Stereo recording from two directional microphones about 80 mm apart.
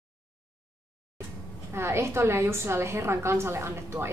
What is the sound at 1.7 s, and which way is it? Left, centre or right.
A woman's voice, right.